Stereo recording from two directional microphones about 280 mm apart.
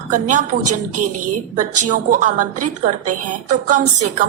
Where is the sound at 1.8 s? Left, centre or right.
Right.